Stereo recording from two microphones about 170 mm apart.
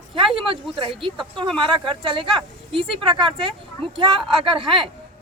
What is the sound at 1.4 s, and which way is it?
A woman's voice, 30° right (ahead or behind).